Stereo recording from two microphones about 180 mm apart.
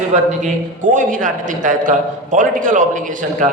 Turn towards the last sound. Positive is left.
turn(degrees=-45)  # may be behind; listen again after turning